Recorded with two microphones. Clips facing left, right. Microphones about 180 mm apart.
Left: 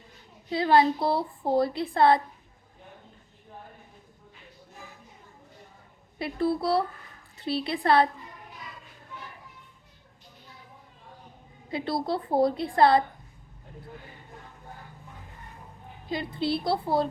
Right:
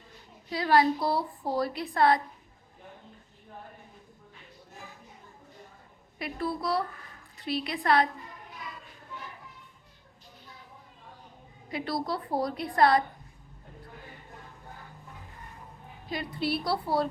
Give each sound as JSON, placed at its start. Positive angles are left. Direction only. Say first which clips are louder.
{"t": 0.5, "sound": "speech", "louder": "left 2 dB", "side_deg": 25}
{"t": 6.1, "sound": "speech", "louder": "left 6 dB", "side_deg": 30}
{"t": 11.7, "sound": "speech", "louder": "left 3 dB", "side_deg": 25}
{"t": 16.0, "sound": "speech", "louder": "left 3 dB", "side_deg": 25}